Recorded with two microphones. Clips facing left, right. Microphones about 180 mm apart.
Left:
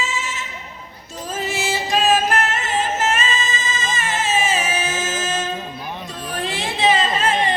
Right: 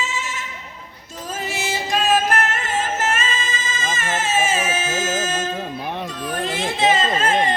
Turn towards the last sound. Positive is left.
turn(degrees=-45)  # may be behind; listen again after turning